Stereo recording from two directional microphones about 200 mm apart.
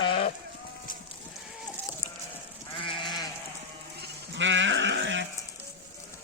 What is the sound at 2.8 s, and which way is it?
Goat, 25° left (ahead or behind).